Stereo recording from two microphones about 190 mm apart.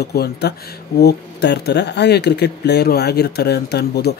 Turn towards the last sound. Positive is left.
turn(degrees=60)  # may be behind; listen again after turning